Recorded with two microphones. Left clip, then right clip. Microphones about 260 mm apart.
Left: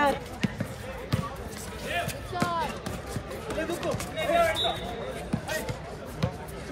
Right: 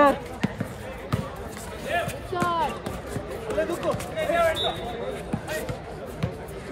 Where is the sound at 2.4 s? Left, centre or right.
Right.